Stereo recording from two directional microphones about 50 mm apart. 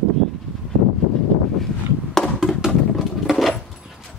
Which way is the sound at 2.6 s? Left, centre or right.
Centre.